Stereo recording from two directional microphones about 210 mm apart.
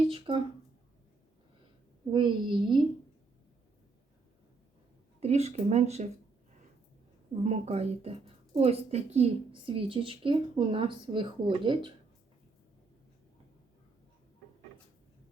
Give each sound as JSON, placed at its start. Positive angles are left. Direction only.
{"t": 0.1, "sound": "a sound", "side_deg": -25}
{"t": 2.1, "sound": "a woman's voice", "side_deg": -25}
{"t": 5.2, "sound": "speech", "side_deg": -30}
{"t": 7.4, "sound": "a woman's voice", "side_deg": -30}